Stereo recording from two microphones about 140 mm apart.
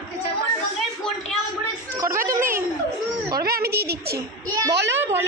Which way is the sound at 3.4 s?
90° right.